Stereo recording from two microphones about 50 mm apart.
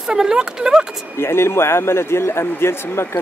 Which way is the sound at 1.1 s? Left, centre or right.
Left.